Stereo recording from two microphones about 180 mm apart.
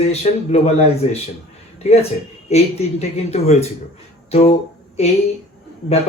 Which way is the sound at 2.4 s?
35° left (ahead or behind).